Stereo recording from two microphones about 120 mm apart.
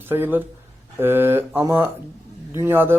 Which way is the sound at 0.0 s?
15° right (ahead or behind).